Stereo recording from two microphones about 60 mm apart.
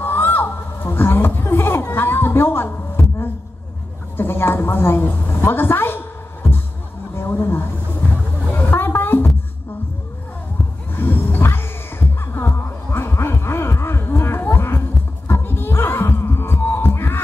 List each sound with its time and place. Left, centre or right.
0.0 s a sound: left
4.2 s a woman's voice: left
7.2 s speech: left
8.1 s a sound: left
11.0 s roaring cats: left
12.2 s music: left
15.2 s heart sounds: left